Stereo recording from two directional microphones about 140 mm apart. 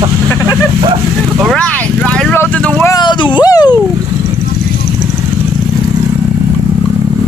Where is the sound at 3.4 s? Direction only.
30° left (ahead or behind).